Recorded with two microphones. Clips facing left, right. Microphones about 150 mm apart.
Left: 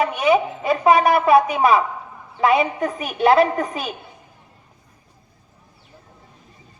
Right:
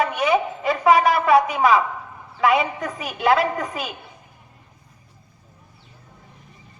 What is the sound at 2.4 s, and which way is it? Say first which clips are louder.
A woman's voice: left 2 dB; 25° left (ahead or behind).